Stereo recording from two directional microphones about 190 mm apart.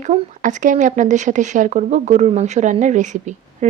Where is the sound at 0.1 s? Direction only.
40° right (ahead or behind).